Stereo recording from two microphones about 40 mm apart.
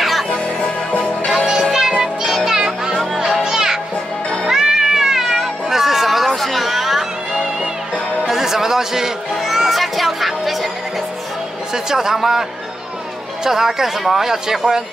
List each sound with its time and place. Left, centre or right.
0.0 s music: centre
0.3 s music: left
1.3 s music: centre
2.3 s children playing: centre
3.1 s music: centre
4.5 s cat: centre
8.2 s music: centre
11.7 s speech: centre